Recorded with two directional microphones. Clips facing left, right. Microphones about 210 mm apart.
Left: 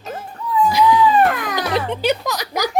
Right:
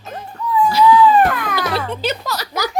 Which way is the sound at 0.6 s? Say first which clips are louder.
Right 2 dB; 15° left (ahead or behind).